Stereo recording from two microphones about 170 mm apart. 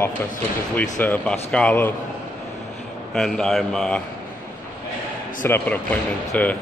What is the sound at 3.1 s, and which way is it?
Speech, 5° left (ahead or behind).